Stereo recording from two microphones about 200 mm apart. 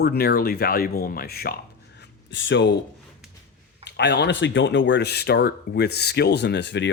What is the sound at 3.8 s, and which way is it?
Speech, 60° left (ahead or behind).